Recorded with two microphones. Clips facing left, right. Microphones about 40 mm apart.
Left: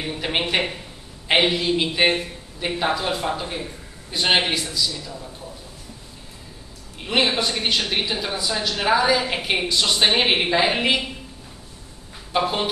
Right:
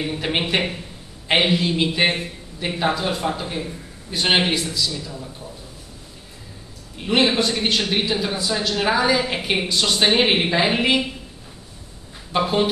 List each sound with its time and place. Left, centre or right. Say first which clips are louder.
0.0 s speech: right 1 dB; centre
7.1 s speech: right 2 dB; centre
12.3 s speech: right 2 dB; centre